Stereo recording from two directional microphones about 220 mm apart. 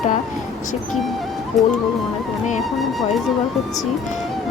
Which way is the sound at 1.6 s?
Centre (ahead or behind).